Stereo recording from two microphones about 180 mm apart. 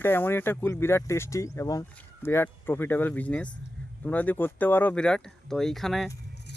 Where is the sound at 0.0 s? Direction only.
10° left (ahead or behind).